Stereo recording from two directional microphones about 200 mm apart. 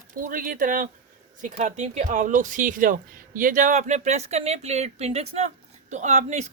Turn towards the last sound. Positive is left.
turn(degrees=-35)  # may be behind; listen again after turning